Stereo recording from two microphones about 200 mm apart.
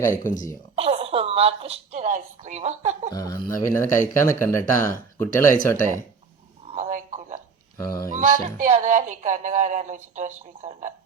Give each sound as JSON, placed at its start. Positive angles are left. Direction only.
{"t": 0.3, "sound": "speech", "side_deg": 40}
{"t": 0.8, "sound": "a woman's voice", "side_deg": -30}
{"t": 3.1, "sound": "speech", "side_deg": 20}
{"t": 6.7, "sound": "a sound", "side_deg": -35}
{"t": 7.8, "sound": "speech", "side_deg": 15}
{"t": 8.1, "sound": "speech", "side_deg": -40}